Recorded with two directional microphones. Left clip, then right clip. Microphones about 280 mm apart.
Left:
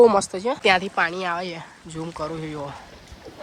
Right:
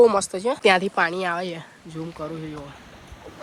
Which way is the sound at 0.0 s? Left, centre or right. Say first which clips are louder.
Left 1 dB; centre.